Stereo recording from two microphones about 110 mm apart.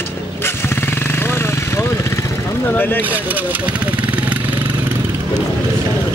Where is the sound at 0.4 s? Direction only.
20° left (ahead or behind).